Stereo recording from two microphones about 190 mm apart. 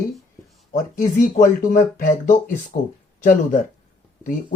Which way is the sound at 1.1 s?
45° left (ahead or behind).